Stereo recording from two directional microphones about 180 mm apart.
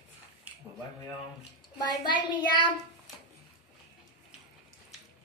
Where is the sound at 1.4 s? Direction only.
25° left (ahead or behind).